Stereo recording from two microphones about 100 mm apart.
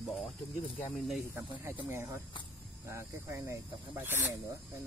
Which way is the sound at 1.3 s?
25° right (ahead or behind).